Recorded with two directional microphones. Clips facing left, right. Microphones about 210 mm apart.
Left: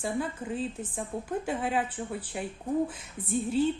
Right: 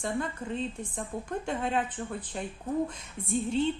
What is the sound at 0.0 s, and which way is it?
Speech, 5° left (ahead or behind).